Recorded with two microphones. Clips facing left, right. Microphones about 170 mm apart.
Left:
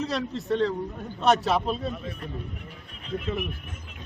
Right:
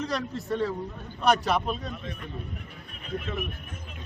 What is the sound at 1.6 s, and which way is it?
Speech, 30° left (ahead or behind).